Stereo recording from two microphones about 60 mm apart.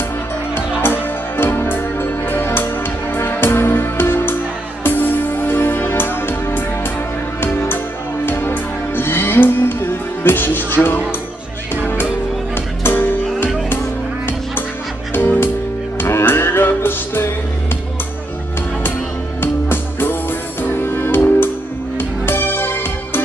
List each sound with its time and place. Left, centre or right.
0.6 s music: left
12.8 s music: left
15.1 s music: left
19.4 s music: left